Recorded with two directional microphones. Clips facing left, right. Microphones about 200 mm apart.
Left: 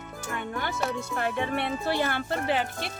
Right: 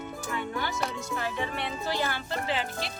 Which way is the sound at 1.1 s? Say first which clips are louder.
Left 4 dB; 55° left (ahead or behind).